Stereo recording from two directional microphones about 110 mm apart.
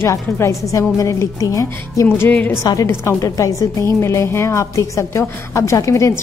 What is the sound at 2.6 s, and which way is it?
A woman's voice, 30° left (ahead or behind).